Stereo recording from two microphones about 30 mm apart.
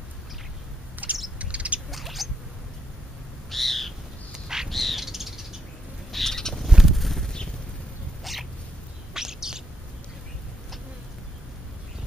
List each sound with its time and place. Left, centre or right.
1.0 s bird: right
1.4 s bird: right
1.9 s a sound: centre
3.4 s owl: centre
4.3 s bird: centre
4.6 s bird: centre
6.1 s bird: centre
6.8 s a sound: centre
8.2 s cat: centre
9.1 s bird: centre